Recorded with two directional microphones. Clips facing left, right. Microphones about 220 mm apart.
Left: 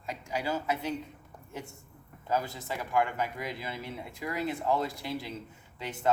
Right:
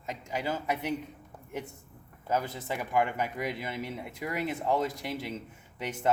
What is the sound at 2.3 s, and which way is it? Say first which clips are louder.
Speech: right 1 dB; 20° right (ahead or behind).